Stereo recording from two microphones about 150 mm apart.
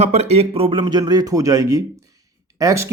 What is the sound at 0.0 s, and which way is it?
Speech, 45° right (ahead or behind).